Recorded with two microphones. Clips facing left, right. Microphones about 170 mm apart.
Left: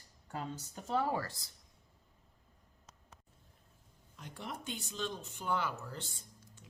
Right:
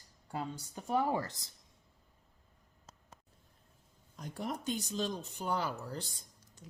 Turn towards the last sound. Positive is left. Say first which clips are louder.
# left 2 dB
turn(degrees=-40)  # may be behind; listen again after turning